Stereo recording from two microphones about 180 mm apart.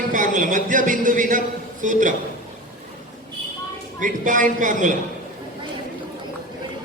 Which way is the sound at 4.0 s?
45° right (ahead or behind).